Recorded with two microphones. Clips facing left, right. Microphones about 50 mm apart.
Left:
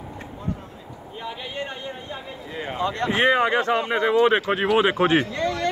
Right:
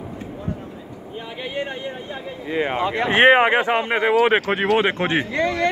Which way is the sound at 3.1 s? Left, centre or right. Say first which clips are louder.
Right 6 dB; right.